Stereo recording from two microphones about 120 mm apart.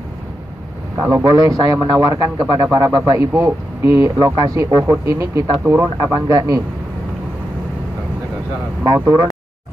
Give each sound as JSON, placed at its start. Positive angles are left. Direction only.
{"t": 0.9, "sound": "a man's voice", "side_deg": -30}
{"t": 8.8, "sound": "speech", "side_deg": -30}